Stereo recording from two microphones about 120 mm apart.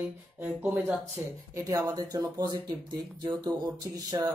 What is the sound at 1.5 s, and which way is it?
Speech, 25° right (ahead or behind).